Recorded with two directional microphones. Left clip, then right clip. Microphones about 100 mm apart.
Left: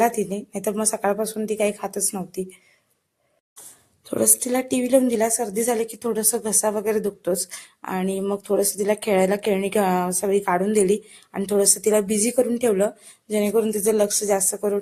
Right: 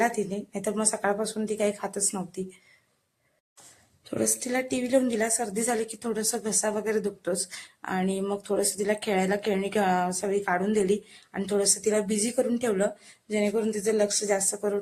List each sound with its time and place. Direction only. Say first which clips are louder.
0.2 s a woman's voice: left 4 dB; 35° left (ahead or behind)
4.1 s a woman's voice: left 6 dB; 40° left (ahead or behind)
13.5 s speech: left 8 dB; 45° left (ahead or behind)